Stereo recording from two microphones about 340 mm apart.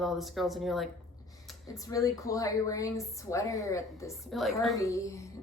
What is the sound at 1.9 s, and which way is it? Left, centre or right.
A woman's voice, centre.